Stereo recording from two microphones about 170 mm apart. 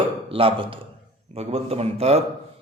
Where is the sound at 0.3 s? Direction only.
30° right (ahead or behind).